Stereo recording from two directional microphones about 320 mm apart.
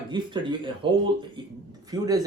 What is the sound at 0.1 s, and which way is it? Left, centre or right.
Speech, centre.